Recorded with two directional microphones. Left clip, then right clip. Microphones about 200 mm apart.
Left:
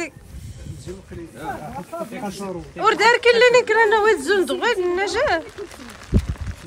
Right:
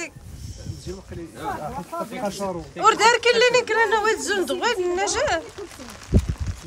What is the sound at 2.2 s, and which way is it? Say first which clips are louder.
Speech: right 3 dB; 15° right (ahead or behind).